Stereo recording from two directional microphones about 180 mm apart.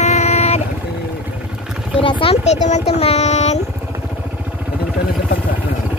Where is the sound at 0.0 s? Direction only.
40° left (ahead or behind).